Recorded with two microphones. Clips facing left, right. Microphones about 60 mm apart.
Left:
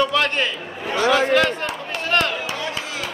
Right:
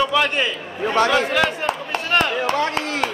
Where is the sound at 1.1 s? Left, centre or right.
Centre.